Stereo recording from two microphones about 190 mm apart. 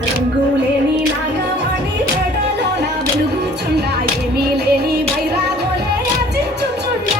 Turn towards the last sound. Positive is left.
turn(degrees=-55)  # may be behind; listen again after turning